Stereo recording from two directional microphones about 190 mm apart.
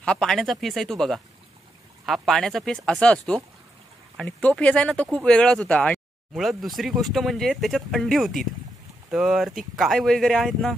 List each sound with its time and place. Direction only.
0.0 s speech: 5° left (ahead or behind)